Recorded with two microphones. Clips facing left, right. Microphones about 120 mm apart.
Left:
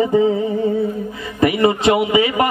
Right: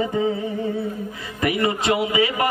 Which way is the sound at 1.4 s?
25° left (ahead or behind).